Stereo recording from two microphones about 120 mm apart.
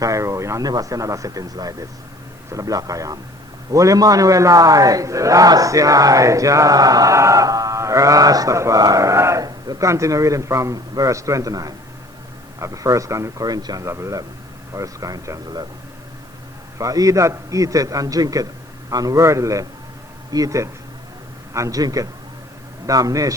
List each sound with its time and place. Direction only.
0.0 s a man's voice: 25° right (ahead or behind)
16.7 s a man's voice: 30° right (ahead or behind)